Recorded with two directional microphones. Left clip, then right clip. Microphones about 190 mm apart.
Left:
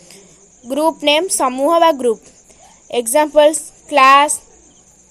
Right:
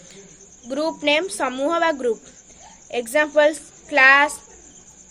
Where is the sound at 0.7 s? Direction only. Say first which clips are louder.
Left 6 dB; 30° left (ahead or behind).